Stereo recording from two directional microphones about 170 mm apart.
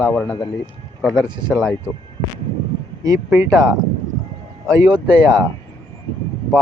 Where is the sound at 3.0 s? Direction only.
20° right (ahead or behind).